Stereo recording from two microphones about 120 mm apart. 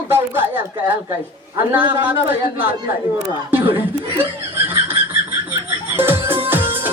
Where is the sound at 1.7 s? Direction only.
15° right (ahead or behind).